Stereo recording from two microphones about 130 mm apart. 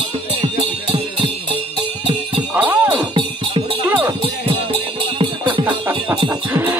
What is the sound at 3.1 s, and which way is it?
Music, 40° right (ahead or behind).